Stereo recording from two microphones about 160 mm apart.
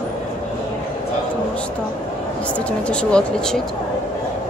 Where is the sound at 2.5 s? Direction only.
5° left (ahead or behind).